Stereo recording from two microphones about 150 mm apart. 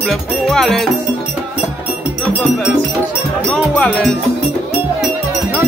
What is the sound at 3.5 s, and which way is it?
Speech, 5° left (ahead or behind).